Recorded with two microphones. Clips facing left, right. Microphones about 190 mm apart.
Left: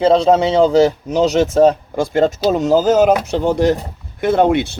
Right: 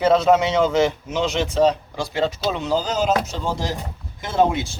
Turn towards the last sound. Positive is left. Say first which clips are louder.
# left 6 dB
turn(degrees=65)  # may be behind; listen again after turning